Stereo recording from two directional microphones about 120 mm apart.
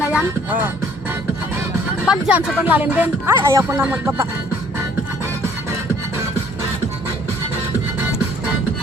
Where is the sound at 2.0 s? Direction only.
5° right (ahead or behind).